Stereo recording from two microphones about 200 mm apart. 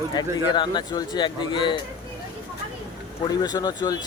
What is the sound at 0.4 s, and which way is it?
A man's voice, 25° left (ahead or behind).